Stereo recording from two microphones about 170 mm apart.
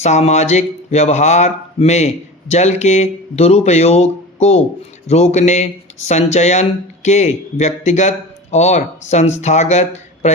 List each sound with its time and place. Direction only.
0.0 s speech: 40° left (ahead or behind)